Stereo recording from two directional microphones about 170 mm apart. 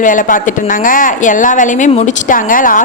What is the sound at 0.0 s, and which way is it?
A woman's voice, 50° left (ahead or behind).